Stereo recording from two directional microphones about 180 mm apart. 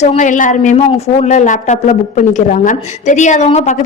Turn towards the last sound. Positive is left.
turn(degrees=40)  # may be behind; listen again after turning